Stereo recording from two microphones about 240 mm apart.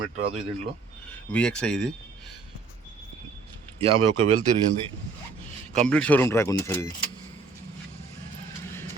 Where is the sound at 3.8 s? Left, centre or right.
Right.